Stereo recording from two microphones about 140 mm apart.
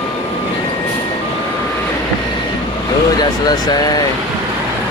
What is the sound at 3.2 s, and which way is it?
Speech, 30° left (ahead or behind).